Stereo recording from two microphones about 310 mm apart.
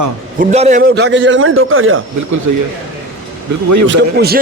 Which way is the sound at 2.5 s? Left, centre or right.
Right.